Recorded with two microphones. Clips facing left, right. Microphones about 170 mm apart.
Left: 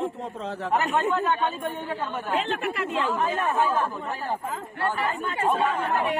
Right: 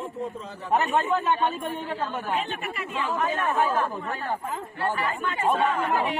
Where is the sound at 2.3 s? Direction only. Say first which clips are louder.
Left 4 dB; 90° left.